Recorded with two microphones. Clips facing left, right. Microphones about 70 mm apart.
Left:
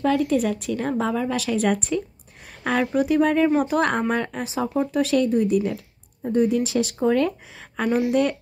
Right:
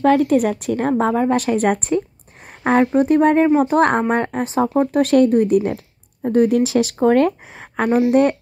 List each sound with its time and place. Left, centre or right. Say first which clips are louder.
0.0 s speech: right 6 dB; right
6.3 s speech: right 5 dB; right